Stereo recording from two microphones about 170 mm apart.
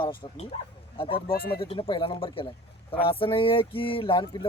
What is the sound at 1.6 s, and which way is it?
Speech, 30° left (ahead or behind).